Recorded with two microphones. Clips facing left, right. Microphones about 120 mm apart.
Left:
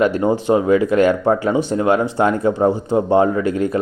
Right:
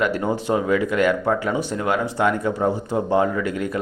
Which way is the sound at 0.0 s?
25° left (ahead or behind).